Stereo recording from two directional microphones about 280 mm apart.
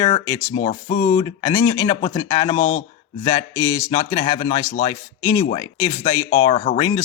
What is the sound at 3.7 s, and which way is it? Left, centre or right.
Speech, centre.